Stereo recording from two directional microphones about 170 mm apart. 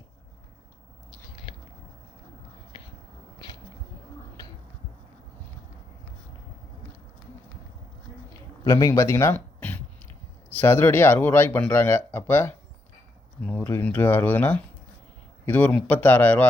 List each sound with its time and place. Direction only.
8.6 s speech: 20° left (ahead or behind)